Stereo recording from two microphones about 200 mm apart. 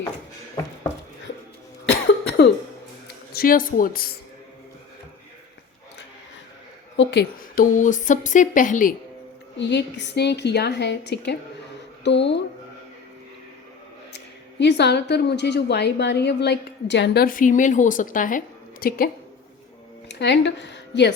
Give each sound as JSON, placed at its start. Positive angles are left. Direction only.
{"t": 1.9, "sound": "cough", "side_deg": 55}
{"t": 3.3, "sound": "speech", "side_deg": 45}
{"t": 6.9, "sound": "a woman's voice", "side_deg": 60}
{"t": 9.6, "sound": "a woman's voice", "side_deg": 60}
{"t": 14.6, "sound": "a woman's voice", "side_deg": 60}
{"t": 17.2, "sound": "a woman's voice", "side_deg": 40}
{"t": 20.1, "sound": "speech", "side_deg": 60}